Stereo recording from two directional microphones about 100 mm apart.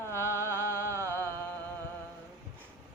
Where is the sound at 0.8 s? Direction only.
30° right (ahead or behind).